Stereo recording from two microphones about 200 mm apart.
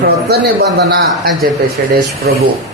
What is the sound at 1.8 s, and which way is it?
Speech, 50° right (ahead or behind).